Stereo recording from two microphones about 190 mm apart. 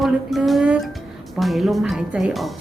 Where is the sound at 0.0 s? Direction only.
Centre (ahead or behind).